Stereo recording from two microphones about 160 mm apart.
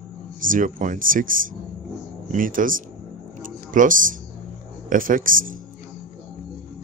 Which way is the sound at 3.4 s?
55° right (ahead or behind).